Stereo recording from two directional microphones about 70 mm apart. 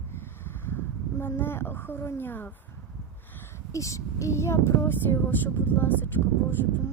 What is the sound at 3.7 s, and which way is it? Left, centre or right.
Speech, left.